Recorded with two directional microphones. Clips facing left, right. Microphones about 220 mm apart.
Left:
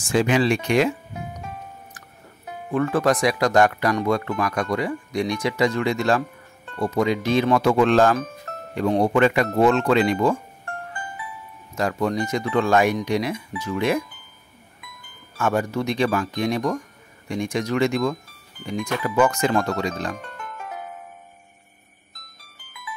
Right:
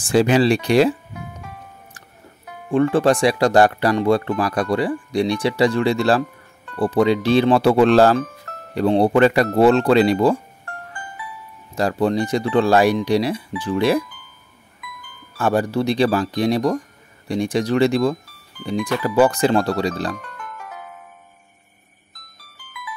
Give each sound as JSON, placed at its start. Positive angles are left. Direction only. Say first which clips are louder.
{"t": 0.0, "sound": "speech", "louder": "right 4 dB", "side_deg": -35}
{"t": 2.7, "sound": "speech", "louder": "right 4 dB", "side_deg": -30}
{"t": 11.7, "sound": "speech", "louder": "right 4 dB", "side_deg": -35}
{"t": 15.3, "sound": "speech", "louder": "right 4 dB", "side_deg": -35}
{"t": 20.2, "sound": "music", "louder": "even", "side_deg": 25}